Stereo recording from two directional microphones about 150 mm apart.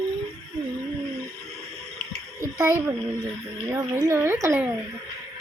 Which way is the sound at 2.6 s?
20° right (ahead or behind).